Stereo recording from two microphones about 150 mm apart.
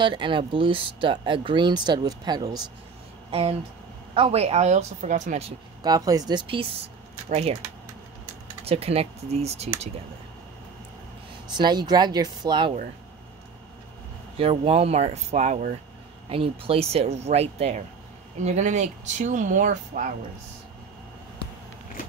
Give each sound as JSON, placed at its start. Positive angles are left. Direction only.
{"t": 0.0, "sound": "speech", "side_deg": -35}
{"t": 3.3, "sound": "speech", "side_deg": -40}
{"t": 5.8, "sound": "speech", "side_deg": -25}
{"t": 8.6, "sound": "speech", "side_deg": -40}
{"t": 11.5, "sound": "speech", "side_deg": -30}
{"t": 14.3, "sound": "speech", "side_deg": -40}
{"t": 16.3, "sound": "speech", "side_deg": -40}